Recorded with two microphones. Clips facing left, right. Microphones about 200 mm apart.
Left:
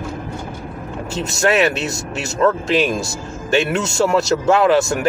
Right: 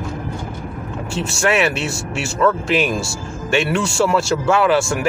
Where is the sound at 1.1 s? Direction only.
40° left (ahead or behind).